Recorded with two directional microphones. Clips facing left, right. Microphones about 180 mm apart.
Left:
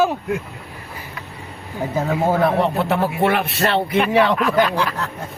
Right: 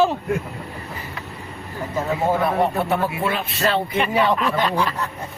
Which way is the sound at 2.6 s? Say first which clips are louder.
Left 1 dB; 80° left.